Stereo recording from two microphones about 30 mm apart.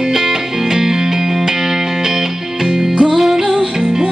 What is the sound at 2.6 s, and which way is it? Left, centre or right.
Music, centre.